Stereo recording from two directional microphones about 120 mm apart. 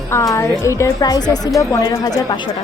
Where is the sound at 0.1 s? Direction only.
25° left (ahead or behind).